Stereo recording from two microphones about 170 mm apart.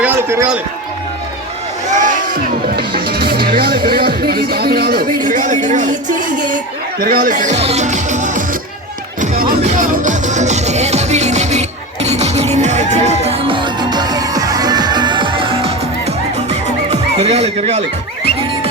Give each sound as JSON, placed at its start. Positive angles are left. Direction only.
{"t": 0.0, "sound": "run", "side_deg": -15}
{"t": 1.9, "sound": "music", "side_deg": -50}
{"t": 7.0, "sound": "speech", "side_deg": -60}
{"t": 9.6, "sound": "music", "side_deg": -50}
{"t": 13.9, "sound": "music", "side_deg": -25}